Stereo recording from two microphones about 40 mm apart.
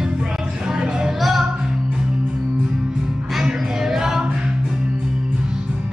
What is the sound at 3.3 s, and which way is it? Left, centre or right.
Music, centre.